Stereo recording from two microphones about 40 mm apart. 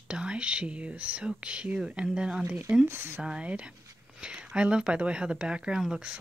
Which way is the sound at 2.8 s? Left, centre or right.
Right.